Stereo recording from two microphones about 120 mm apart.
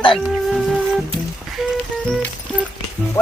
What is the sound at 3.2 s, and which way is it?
Speech, 25° left (ahead or behind).